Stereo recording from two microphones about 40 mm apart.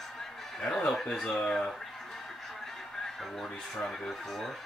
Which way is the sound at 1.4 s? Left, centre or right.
Centre.